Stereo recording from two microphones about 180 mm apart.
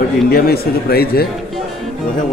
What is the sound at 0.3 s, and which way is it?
Speech, 60° left (ahead or behind).